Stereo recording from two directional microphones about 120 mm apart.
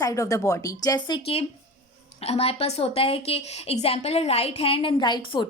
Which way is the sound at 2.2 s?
55° left (ahead or behind).